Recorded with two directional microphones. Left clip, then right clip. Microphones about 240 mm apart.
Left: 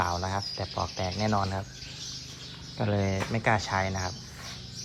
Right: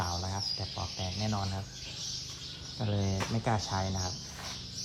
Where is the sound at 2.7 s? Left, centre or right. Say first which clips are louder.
Left 7 dB; centre.